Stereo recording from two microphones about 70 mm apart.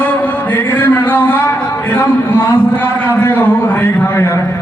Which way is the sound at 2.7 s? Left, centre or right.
Left.